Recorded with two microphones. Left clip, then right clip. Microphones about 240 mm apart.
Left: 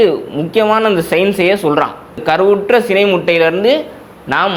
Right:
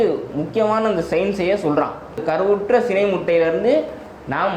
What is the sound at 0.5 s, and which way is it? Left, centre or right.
Speech, left.